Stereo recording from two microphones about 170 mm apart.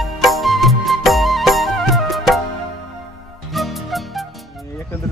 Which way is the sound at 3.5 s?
Centre (ahead or behind).